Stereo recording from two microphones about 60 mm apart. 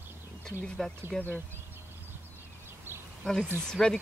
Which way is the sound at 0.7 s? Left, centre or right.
Centre.